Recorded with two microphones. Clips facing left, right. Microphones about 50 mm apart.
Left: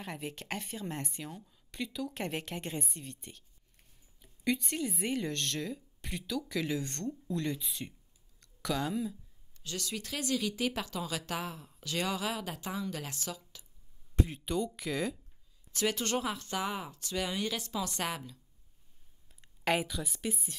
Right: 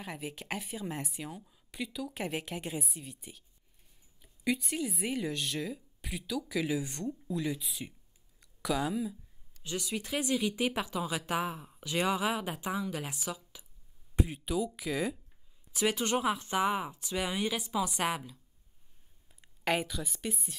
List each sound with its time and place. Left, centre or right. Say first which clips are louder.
0.0 s speech: even; centre
9.6 s a woman's voice: right 3 dB; centre